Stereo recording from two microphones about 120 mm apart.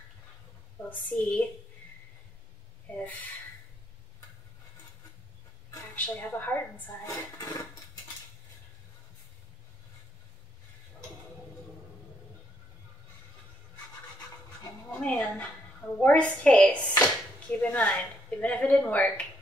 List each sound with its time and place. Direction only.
0.8 s a woman's voice: 15° left (ahead or behind)
2.9 s a woman's voice: 15° left (ahead or behind)
5.9 s a woman's voice: 15° left (ahead or behind)
7.1 s dishes: 30° left (ahead or behind)
14.9 s a woman's voice: 10° left (ahead or behind)